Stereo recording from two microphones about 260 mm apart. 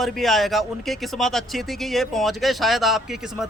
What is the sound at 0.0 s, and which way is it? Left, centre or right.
A man's voice, centre.